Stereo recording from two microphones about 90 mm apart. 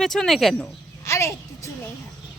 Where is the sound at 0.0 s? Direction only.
5° left (ahead or behind).